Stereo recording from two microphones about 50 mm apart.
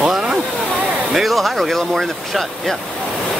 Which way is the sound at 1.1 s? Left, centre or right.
Centre.